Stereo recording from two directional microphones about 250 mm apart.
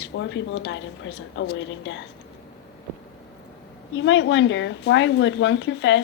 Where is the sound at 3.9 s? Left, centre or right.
Left.